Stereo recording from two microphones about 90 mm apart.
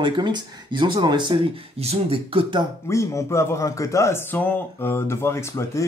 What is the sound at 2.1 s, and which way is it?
Speech, 85° right.